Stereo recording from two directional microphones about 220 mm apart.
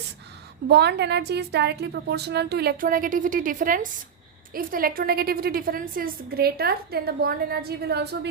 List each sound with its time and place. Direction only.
0.7 s a woman's voice: 50° right (ahead or behind)